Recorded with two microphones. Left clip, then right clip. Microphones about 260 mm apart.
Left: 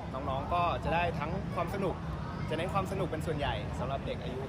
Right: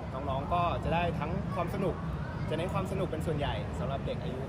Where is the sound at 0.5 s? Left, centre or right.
Centre.